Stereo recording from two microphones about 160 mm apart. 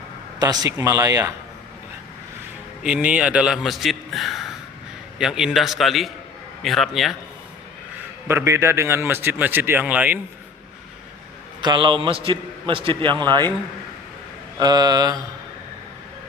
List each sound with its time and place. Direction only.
0.3 s speech: 25° right (ahead or behind)
2.8 s a man's voice: 10° right (ahead or behind)
8.3 s a man's voice: 15° right (ahead or behind)
11.6 s a man's voice: 30° right (ahead or behind)
14.6 s speech: 25° right (ahead or behind)